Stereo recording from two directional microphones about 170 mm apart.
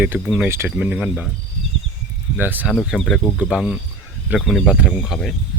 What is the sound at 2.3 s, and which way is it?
Speech, 10° right (ahead or behind).